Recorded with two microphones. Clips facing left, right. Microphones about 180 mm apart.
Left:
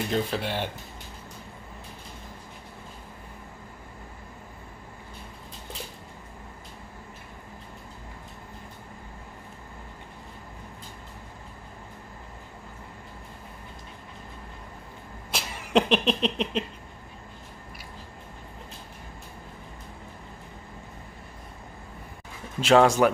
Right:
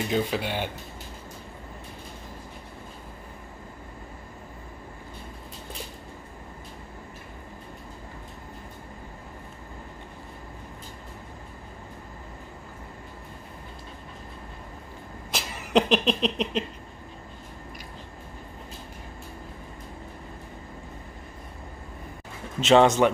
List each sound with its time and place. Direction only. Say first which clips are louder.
0.1 s speech: right 2 dB; 5° right (ahead or behind)
15.3 s a sound: right 1 dB; centre (ahead or behind)
22.6 s speech: right 1 dB; 5° left (ahead or behind)